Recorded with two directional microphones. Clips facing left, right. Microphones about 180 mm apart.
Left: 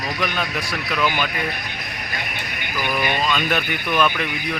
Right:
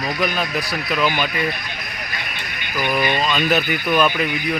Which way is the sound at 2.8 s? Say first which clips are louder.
Right 2 dB; 15° right (ahead or behind).